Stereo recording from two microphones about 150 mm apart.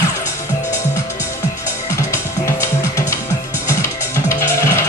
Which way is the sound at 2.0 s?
20° left (ahead or behind).